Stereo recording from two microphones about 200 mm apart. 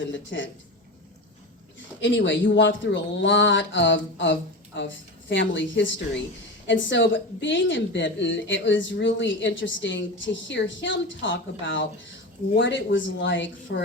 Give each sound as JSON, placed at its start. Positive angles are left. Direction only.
{"t": 0.0, "sound": "speech", "side_deg": 65}
{"t": 2.0, "sound": "a woman's voice", "side_deg": 65}